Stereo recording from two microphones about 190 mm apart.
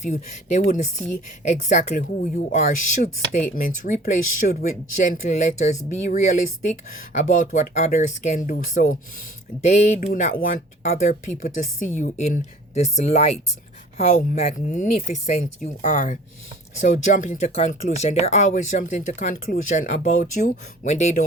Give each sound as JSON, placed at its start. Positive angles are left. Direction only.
{"t": 0.0, "sound": "speech", "side_deg": 40}